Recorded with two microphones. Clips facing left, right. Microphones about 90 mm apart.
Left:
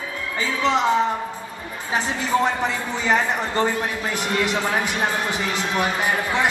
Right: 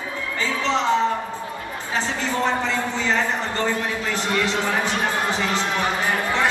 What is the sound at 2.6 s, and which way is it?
A man's voice, 15° left (ahead or behind).